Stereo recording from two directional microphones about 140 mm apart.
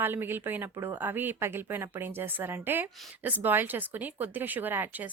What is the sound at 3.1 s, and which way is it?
A woman's voice, 10° right (ahead or behind).